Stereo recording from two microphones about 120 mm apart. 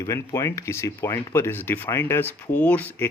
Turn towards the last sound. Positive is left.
turn(degrees=15)  # may be behind; listen again after turning